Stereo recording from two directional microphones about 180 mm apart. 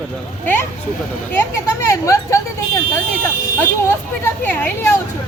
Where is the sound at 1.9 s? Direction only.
15° left (ahead or behind).